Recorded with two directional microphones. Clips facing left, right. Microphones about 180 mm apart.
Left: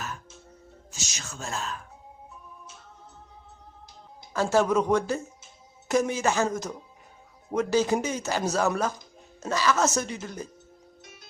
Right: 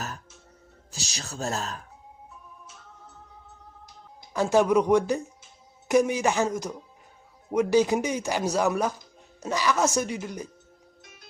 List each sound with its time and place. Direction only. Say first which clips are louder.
0.9 s speech: right 3 dB; 35° right (ahead or behind)
4.4 s speech: right 2 dB; 15° right (ahead or behind)